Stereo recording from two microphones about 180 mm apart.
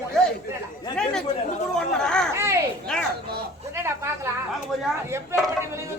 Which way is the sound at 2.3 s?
15° right (ahead or behind).